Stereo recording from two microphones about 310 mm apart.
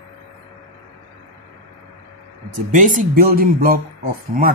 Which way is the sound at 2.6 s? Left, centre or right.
Right.